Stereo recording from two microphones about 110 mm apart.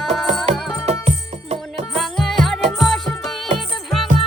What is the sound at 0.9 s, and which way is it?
Music, 85° right.